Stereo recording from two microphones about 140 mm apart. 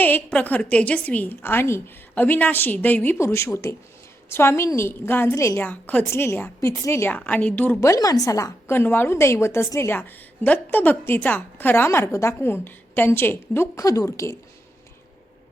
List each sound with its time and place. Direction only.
0.0 s a woman's voice: 10° left (ahead or behind)